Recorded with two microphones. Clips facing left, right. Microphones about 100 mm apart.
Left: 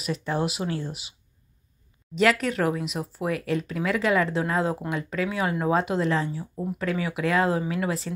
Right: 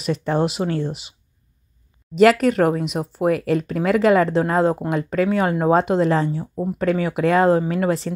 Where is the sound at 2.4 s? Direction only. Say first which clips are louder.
Right 8 dB; 55° right (ahead or behind).